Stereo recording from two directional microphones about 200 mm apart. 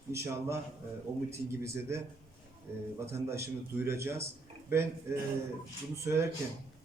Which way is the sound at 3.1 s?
15° right (ahead or behind).